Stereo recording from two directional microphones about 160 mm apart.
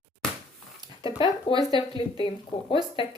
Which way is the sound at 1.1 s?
30° left (ahead or behind).